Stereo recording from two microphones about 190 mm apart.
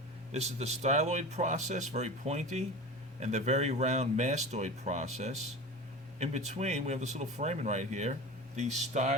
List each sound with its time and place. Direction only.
0.3 s speech: 35° right (ahead or behind)